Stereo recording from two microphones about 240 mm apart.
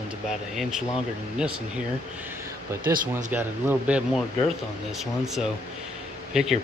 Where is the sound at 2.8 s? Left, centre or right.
Right.